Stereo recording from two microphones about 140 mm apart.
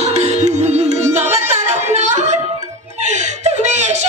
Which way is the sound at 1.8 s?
55° right (ahead or behind).